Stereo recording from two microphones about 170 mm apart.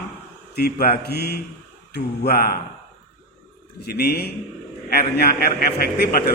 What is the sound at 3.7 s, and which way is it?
Mantra, 70° left (ahead or behind).